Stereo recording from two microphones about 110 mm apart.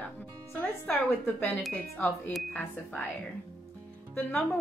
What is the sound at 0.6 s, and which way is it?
A woman's voice, 15° left (ahead or behind).